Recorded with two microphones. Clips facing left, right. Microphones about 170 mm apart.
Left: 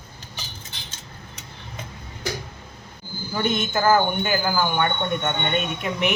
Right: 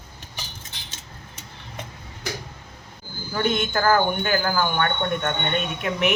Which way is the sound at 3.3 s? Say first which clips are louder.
Right 1 dB; centre (ahead or behind).